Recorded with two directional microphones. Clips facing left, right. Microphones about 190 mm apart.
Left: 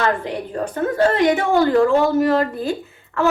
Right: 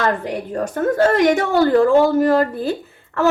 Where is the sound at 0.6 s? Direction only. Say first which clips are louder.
Right 1 dB; 45° right (ahead or behind).